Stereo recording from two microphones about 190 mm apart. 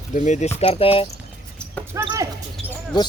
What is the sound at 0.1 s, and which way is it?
Speech, 40° left (ahead or behind).